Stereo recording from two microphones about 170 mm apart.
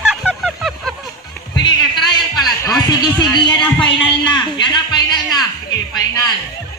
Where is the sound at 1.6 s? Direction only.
25° left (ahead or behind).